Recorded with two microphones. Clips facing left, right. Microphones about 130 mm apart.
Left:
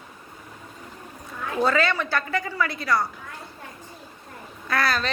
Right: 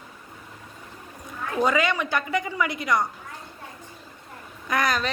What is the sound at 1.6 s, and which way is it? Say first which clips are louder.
A woman's voice: even; 15° right (ahead or behind).